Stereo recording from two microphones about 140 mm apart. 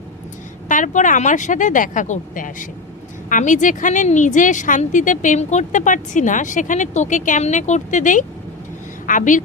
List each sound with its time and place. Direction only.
0.7 s a woman's voice: 65° left (ahead or behind)